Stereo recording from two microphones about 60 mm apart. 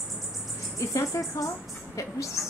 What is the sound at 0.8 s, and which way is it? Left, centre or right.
Speech, left.